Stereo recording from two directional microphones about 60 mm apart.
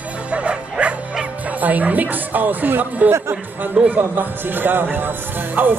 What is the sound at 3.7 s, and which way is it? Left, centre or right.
Speech, right.